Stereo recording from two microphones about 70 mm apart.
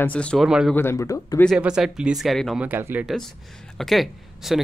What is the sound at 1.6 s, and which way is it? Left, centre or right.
Speech, centre.